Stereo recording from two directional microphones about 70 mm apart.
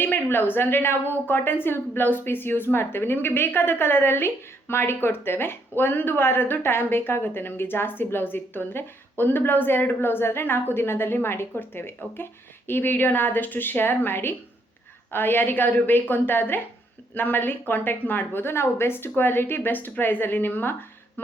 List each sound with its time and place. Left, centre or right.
0.0 s a woman's voice: left